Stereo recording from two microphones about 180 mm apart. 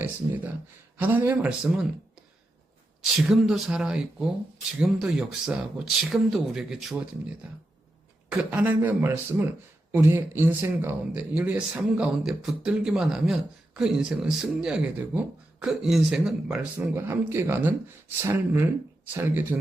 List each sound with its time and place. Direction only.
0.9 s a man's voice: 10° right (ahead or behind)
3.0 s a man's voice: centre (ahead or behind)